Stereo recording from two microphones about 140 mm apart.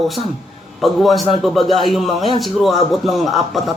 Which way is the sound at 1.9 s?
Centre (ahead or behind).